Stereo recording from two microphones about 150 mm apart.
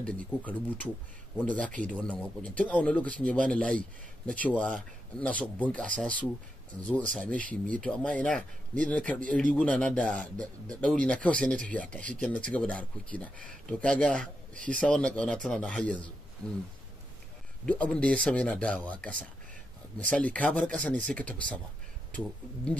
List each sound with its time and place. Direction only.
0.0 s speech: 10° left (ahead or behind)
14.5 s speech: 60° right (ahead or behind)
14.8 s speech: 5° left (ahead or behind)
17.6 s speech: 10° left (ahead or behind)
20.1 s speech: 10° left (ahead or behind)